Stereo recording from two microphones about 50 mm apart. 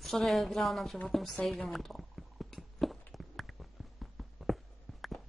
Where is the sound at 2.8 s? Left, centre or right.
Centre.